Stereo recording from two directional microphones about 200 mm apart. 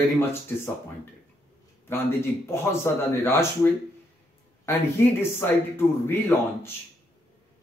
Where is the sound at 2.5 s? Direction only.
10° left (ahead or behind).